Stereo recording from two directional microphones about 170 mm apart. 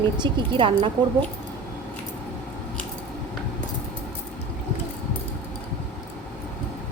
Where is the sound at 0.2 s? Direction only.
30° right (ahead or behind).